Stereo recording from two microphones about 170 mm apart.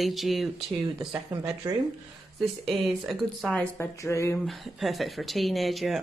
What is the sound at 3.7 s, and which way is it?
Speech, 15° left (ahead or behind).